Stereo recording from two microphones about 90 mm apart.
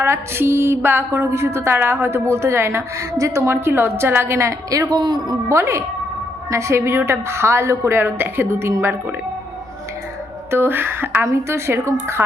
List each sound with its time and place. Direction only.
0.0 s mantra: 30° right (ahead or behind)
4.9 s a man's voice: 55° right (ahead or behind)
5.5 s a woman's voice: 30° right (ahead or behind)
10.5 s mantra: 25° right (ahead or behind)